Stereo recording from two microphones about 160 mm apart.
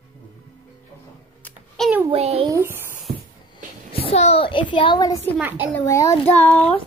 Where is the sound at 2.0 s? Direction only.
40° right (ahead or behind).